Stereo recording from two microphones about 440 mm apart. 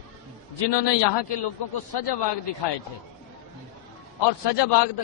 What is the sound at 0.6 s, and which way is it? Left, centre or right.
A man's voice, left.